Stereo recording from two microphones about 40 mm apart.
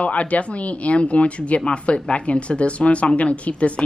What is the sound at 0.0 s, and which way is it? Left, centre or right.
Speech, left.